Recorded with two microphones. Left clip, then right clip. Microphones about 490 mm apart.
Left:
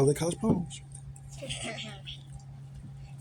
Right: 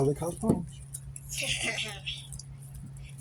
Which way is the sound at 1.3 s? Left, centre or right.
Right.